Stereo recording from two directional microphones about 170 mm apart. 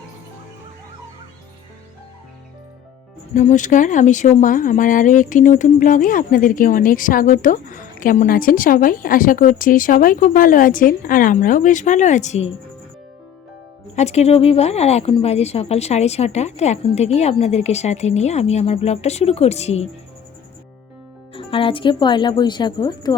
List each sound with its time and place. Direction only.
3.3 s speech: 45° left (ahead or behind)
13.9 s a woman's voice: 40° left (ahead or behind)
21.3 s speech: 30° left (ahead or behind)